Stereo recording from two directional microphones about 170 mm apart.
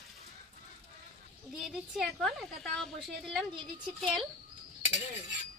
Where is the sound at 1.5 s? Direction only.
5° right (ahead or behind).